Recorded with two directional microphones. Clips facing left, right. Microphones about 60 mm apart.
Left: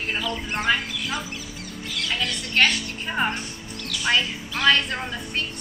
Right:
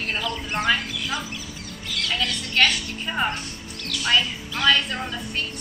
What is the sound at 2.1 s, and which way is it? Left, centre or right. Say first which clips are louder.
A woman's voice: even; left.